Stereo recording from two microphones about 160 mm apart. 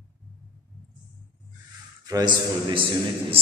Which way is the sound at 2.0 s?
25° right (ahead or behind).